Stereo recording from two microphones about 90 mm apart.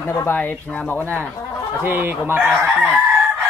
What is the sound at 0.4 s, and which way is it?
Speech, 15° left (ahead or behind).